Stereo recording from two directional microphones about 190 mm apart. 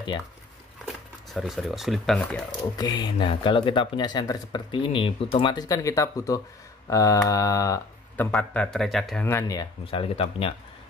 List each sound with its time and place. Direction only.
0.8 s speech: centre (ahead or behind)
2.8 s speech: 20° left (ahead or behind)
8.3 s a man's voice: 5° left (ahead or behind)
9.2 s speech: 15° left (ahead or behind)
9.8 s speech: 30° left (ahead or behind)